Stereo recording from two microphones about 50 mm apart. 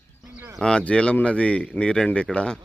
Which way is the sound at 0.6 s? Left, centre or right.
Centre.